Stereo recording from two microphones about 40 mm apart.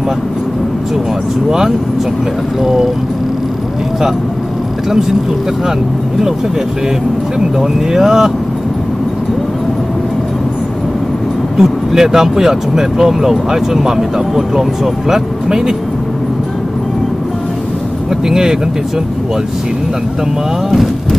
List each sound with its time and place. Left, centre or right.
2.6 s speech: centre
7.3 s speech: centre
11.5 s speech: centre
18.3 s speech: centre
20.7 s speech: centre